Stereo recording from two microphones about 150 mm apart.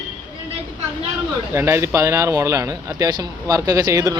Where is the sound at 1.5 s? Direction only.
20° right (ahead or behind).